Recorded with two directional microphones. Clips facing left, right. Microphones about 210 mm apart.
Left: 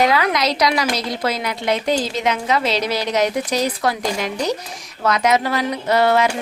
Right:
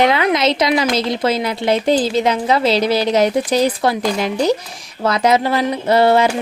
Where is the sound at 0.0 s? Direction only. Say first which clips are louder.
Right 3 dB; 25° right (ahead or behind).